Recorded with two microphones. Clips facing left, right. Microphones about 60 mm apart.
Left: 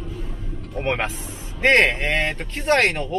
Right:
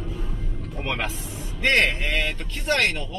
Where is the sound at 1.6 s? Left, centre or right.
Left.